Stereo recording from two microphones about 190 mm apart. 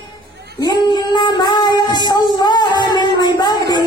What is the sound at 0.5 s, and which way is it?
Child singing, 20° left (ahead or behind).